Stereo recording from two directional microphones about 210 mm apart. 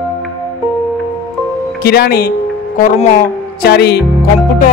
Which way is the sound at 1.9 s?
50° left (ahead or behind).